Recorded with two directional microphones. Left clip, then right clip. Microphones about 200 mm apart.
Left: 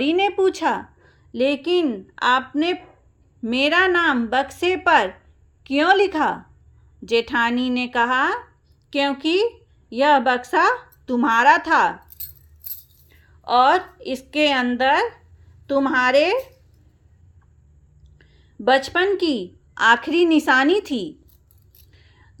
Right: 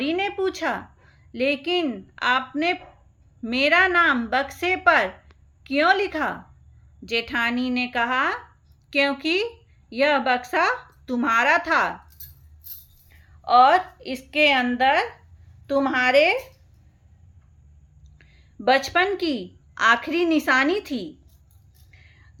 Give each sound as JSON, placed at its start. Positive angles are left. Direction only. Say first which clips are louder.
{"t": 0.0, "sound": "a sound", "louder": "left 6 dB", "side_deg": 25}
{"t": 1.3, "sound": "a woman's voice", "louder": "left 3 dB", "side_deg": 20}
{"t": 13.1, "sound": "a woman's voice", "louder": "right 1 dB", "side_deg": 20}
{"t": 18.2, "sound": "a sound", "louder": "left 4 dB", "side_deg": 10}
{"t": 18.9, "sound": "a woman's voice", "louder": "left 2 dB", "side_deg": 10}
{"t": 21.9, "sound": "whispering", "louder": "right 3 dB", "side_deg": 15}